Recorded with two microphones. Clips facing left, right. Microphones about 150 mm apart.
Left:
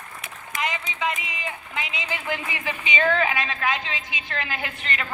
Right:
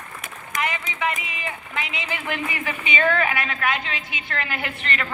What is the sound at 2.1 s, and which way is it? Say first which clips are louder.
A woman's voice: right 2 dB; 20° left (ahead or behind).